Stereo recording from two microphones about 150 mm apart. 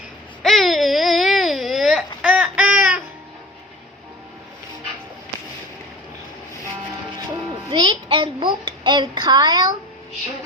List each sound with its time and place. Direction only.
0.4 s baby cry: centre (ahead or behind)
2.2 s a sound: 10° right (ahead or behind)
6.8 s music: 30° right (ahead or behind)